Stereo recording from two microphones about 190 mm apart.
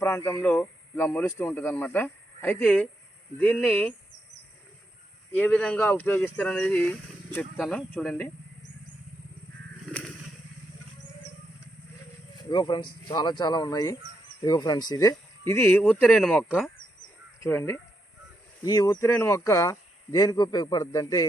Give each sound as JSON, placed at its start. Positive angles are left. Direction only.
{"t": 0.3, "sound": "speech", "side_deg": 15}
{"t": 5.4, "sound": "speech", "side_deg": 5}
{"t": 12.4, "sound": "speech", "side_deg": 25}